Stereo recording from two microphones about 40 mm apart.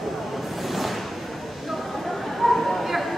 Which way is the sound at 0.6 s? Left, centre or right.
Centre.